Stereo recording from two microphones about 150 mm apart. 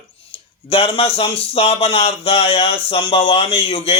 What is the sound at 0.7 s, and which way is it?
A man's voice, 40° left (ahead or behind).